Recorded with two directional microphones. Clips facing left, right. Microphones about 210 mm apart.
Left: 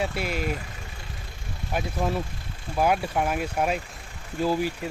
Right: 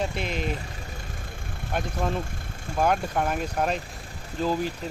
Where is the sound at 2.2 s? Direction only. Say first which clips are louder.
Right 2 dB; 50° right (ahead or behind).